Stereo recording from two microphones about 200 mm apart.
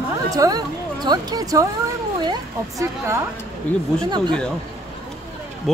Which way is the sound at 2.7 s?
15° right (ahead or behind).